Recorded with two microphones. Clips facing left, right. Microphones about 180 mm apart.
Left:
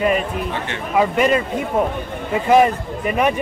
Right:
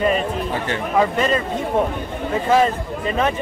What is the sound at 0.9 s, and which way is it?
Speech, 10° left (ahead or behind).